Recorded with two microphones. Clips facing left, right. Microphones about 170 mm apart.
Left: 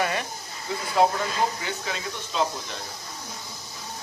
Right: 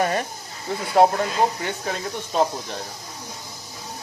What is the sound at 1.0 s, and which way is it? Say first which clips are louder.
Speech: right 5 dB; 60° right (ahead or behind).